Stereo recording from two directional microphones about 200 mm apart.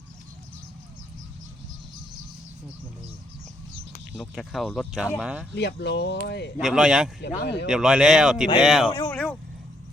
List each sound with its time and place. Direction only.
4.1 s speech: centre (ahead or behind)
5.5 s speech: 60° left (ahead or behind)
6.6 s speech: 5° right (ahead or behind)
7.2 s speech: 60° left (ahead or behind)
7.7 s speech: 5° right (ahead or behind)
8.9 s speech: 20° left (ahead or behind)